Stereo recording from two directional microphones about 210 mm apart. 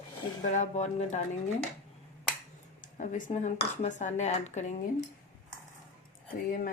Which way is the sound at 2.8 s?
35° left (ahead or behind).